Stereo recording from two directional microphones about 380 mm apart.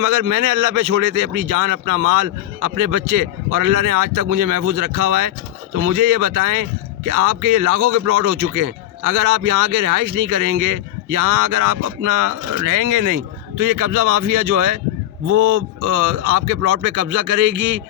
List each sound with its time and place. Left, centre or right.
0.0 s speech: right
15.8 s speech: right